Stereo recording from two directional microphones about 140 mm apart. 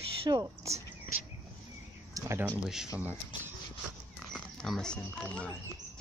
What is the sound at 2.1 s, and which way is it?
Speech, 20° right (ahead or behind).